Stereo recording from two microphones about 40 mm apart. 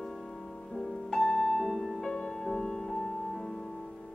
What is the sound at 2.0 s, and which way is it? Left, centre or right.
Music, centre.